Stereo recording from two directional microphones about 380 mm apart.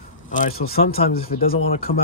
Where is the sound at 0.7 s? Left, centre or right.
Centre.